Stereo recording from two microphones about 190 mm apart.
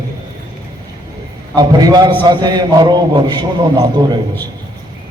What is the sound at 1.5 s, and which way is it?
A man's voice, 20° right (ahead or behind).